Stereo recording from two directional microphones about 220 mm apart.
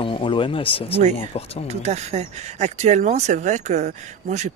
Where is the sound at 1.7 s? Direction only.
30° right (ahead or behind).